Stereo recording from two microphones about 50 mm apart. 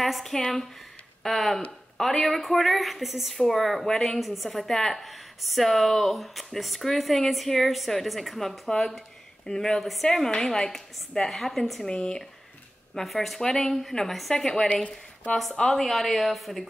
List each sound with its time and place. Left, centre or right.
0.0 s a woman's voice: centre
4.2 s a woman's voice: centre
11.9 s speech: centre
12.9 s a woman's voice: centre
15.7 s a woman's voice: centre